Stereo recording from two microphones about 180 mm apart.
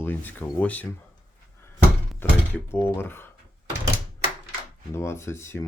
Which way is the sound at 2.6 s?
15° left (ahead or behind).